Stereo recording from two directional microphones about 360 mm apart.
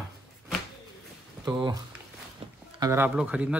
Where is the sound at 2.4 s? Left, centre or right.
Centre.